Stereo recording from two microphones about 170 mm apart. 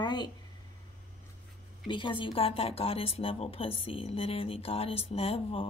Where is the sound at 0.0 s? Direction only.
25° left (ahead or behind).